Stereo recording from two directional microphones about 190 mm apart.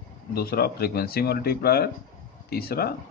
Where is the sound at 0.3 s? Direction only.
55° left (ahead or behind).